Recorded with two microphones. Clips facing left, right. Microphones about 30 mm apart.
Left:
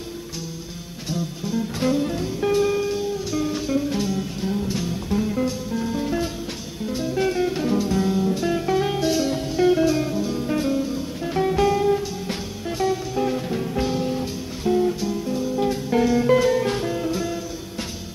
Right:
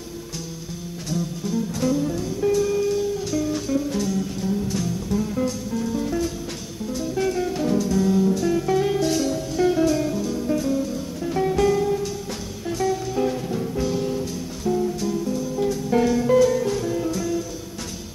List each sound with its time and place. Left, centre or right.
1.1 s music: centre
1.8 s music: left
2.8 s music: left
5.2 s music: centre
13.1 s music: centre
13.9 s music: left
15.9 s music: centre
16.2 s music: left
17.1 s music: left